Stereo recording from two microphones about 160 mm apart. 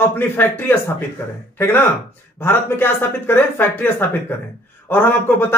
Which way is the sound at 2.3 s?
15° left (ahead or behind).